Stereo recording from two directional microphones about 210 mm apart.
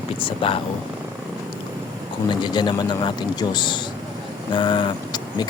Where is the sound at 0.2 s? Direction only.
25° left (ahead or behind).